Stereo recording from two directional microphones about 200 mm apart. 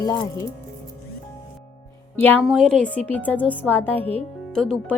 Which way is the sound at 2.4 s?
Centre (ahead or behind).